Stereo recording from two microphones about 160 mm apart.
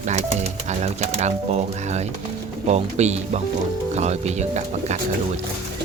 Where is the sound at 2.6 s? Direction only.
45° right (ahead or behind).